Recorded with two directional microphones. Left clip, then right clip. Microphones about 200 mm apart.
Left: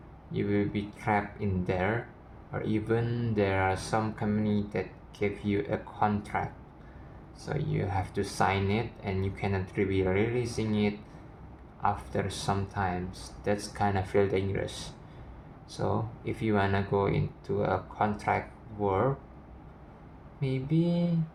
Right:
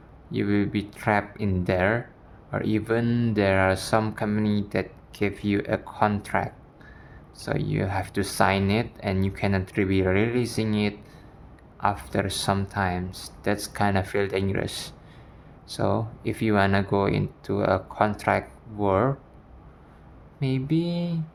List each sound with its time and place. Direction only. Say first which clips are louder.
0.3 s speech: right 4 dB; 60° right (ahead or behind)
20.4 s speech: right 4 dB; 60° right (ahead or behind)